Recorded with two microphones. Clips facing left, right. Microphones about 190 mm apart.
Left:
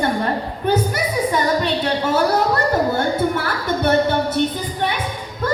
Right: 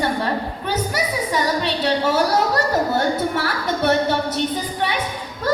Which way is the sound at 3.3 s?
50° left (ahead or behind).